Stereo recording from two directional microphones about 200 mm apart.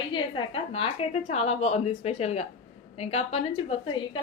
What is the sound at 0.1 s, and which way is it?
A woman's voice, 25° left (ahead or behind).